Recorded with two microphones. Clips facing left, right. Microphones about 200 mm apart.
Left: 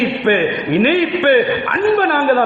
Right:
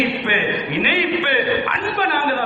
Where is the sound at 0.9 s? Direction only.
50° left (ahead or behind).